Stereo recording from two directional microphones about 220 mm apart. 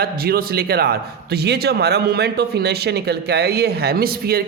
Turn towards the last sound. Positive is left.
turn(degrees=-45)  # may be behind; listen again after turning